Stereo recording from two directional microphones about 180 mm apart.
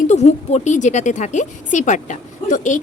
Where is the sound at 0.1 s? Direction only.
40° left (ahead or behind).